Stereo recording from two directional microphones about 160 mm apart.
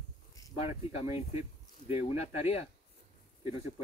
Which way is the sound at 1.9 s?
40° left (ahead or behind).